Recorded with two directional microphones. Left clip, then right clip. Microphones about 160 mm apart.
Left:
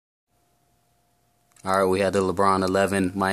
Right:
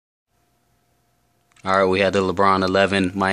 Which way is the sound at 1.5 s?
5° left (ahead or behind).